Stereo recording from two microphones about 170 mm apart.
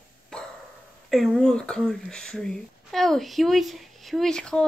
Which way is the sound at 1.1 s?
Centre (ahead or behind).